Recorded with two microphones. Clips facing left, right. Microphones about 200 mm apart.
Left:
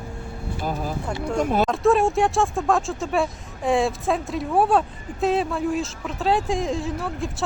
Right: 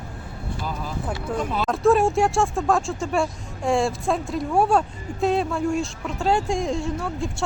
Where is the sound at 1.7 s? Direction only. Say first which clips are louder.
Right 5 dB; centre (ahead or behind).